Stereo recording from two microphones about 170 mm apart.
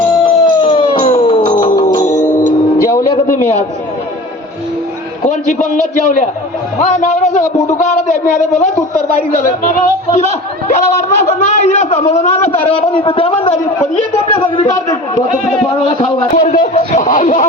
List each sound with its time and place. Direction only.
0.2 s howl: 30° left (ahead or behind)
2.0 s music: 45° left (ahead or behind)
6.7 s a man's voice: 45° left (ahead or behind)
9.3 s a man's voice: 55° left (ahead or behind)
10.1 s a man's voice: 40° left (ahead or behind)
14.3 s a man's voice: 30° left (ahead or behind)
16.0 s a man's voice: 50° left (ahead or behind)